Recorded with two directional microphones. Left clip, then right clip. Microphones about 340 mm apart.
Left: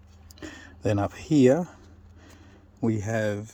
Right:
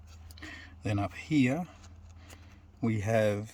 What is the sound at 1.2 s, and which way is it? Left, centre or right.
Speech, centre.